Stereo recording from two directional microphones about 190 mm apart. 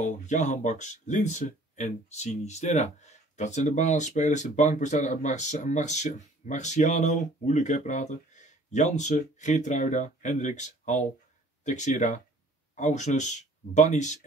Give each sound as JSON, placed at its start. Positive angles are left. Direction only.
{"t": 0.0, "sound": "speech", "side_deg": 40}